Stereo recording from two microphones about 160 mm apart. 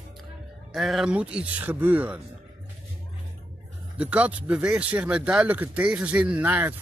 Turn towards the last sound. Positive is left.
turn(degrees=-10)  # may be behind; listen again after turning